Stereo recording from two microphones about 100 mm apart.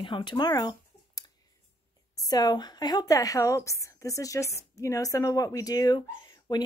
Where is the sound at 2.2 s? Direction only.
40° left (ahead or behind).